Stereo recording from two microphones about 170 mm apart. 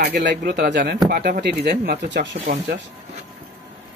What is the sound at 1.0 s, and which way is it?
Speech, 55° right (ahead or behind).